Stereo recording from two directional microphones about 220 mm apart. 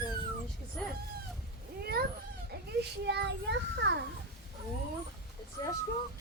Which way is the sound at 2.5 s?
45° right (ahead or behind).